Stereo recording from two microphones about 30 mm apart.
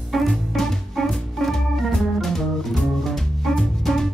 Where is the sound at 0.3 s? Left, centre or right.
Centre.